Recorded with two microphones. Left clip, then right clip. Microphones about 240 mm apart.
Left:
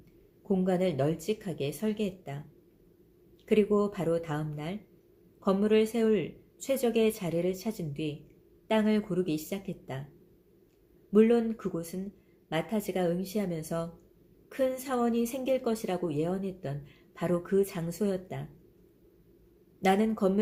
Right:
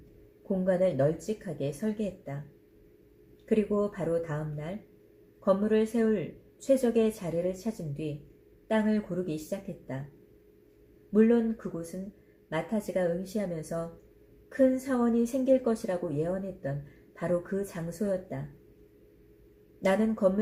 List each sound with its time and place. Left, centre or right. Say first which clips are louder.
0.6 s speech: right 4 dB; left
3.5 s a woman's voice: left 2 dB; left
8.6 s a woman's voice: left 1 dB; left
11.1 s a woman's voice: left 1 dB; left
17.2 s a woman's voice: left 2 dB; left
19.8 s speech: right 1 dB; left